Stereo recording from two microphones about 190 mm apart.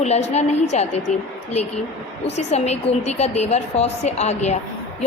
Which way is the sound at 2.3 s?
35° left (ahead or behind).